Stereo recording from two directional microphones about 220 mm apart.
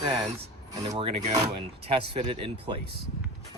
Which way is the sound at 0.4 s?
30° right (ahead or behind).